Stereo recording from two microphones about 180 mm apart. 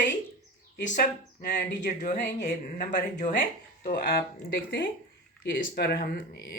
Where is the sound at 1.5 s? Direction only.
55° left (ahead or behind).